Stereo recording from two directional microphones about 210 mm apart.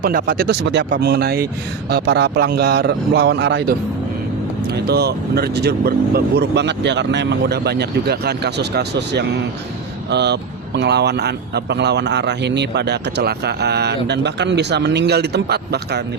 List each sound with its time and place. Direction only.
0.0 s a man's voice: 40° right (ahead or behind)